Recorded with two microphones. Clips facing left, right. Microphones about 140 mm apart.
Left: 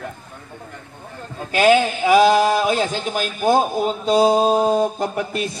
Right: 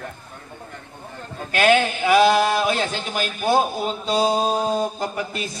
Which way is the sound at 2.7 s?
10° left (ahead or behind).